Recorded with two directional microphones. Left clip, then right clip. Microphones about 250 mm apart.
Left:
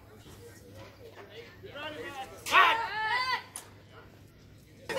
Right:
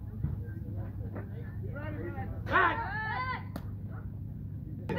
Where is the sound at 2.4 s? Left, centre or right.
Left.